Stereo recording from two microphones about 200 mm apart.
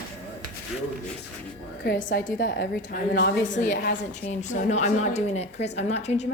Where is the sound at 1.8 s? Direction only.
45° left (ahead or behind).